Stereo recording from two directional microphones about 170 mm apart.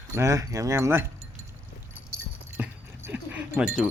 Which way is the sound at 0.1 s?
15° right (ahead or behind).